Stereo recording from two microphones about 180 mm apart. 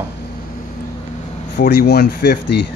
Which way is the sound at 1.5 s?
65° left (ahead or behind).